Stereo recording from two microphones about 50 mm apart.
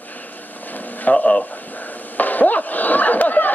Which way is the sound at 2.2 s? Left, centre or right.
Left.